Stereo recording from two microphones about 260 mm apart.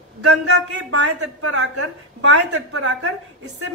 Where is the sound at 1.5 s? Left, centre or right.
Right.